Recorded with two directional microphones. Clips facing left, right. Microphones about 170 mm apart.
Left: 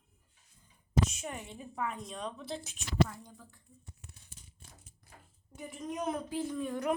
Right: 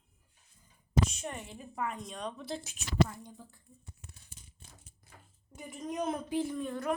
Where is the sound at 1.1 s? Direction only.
5° left (ahead or behind).